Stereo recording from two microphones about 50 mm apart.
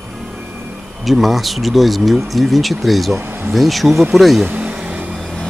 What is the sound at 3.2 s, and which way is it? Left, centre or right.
Speech, right.